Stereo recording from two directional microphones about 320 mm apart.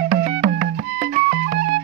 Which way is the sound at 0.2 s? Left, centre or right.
Right.